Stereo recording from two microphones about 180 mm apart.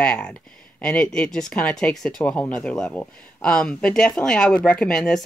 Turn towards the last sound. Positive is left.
turn(degrees=5)  # may be behind; listen again after turning